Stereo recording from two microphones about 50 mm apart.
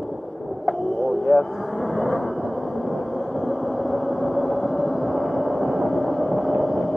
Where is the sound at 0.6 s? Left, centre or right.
Centre.